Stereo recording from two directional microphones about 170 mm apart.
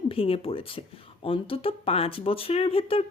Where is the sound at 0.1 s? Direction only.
35° left (ahead or behind).